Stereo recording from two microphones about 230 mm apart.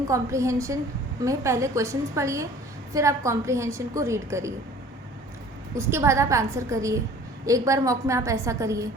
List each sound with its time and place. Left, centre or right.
0.1 s a woman's voice: centre
5.7 s a woman's voice: centre